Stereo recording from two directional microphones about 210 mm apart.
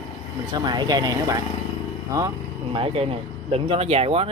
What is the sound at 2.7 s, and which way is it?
Speech, 25° right (ahead or behind).